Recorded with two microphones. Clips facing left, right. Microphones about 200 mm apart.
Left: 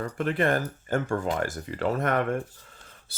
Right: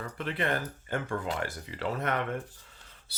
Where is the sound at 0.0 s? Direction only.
45° left (ahead or behind).